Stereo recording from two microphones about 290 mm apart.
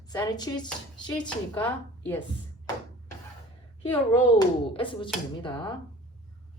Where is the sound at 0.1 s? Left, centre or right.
Centre.